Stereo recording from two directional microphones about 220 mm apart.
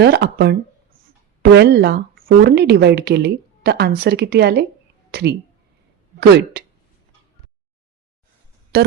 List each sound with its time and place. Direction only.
0.0 s speech: 45° right (ahead or behind)
8.7 s speech: 45° right (ahead or behind)